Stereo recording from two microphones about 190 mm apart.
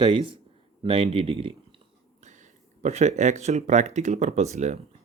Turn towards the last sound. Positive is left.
turn(degrees=-40)  # may be behind; listen again after turning